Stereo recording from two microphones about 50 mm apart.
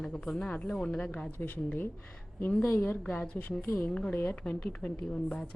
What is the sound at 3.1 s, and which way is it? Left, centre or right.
A woman's voice, left.